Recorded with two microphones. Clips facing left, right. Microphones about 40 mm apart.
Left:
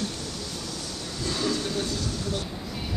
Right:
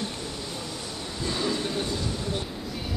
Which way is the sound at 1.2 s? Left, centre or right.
Right.